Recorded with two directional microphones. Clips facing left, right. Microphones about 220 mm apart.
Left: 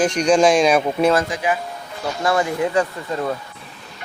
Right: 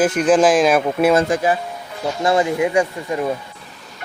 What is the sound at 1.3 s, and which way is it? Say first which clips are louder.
Speech: right 4 dB; 40° right (ahead or behind).